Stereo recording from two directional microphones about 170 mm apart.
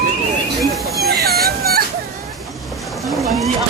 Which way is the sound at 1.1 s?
65° right (ahead or behind).